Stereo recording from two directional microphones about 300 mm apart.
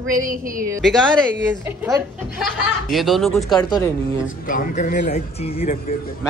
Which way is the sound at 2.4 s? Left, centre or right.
Centre.